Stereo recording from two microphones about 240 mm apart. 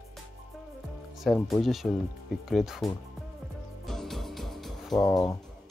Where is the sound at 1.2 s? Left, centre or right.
Centre.